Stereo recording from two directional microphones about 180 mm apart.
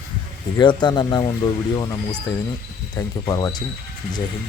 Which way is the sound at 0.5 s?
25° left (ahead or behind).